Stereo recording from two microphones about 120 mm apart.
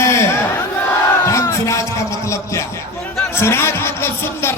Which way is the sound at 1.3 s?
25° left (ahead or behind).